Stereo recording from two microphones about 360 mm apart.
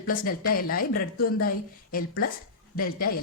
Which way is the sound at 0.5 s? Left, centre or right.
Left.